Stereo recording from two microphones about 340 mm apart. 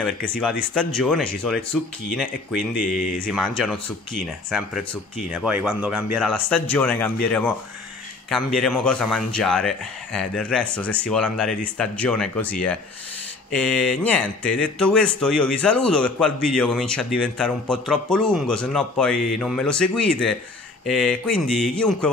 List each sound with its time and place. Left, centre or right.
0.3 s speech: centre
3.0 s speech: left
3.3 s speech: centre
8.5 s speech: centre